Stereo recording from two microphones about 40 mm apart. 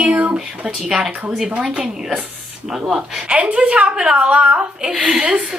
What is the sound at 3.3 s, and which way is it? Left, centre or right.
Speech, right.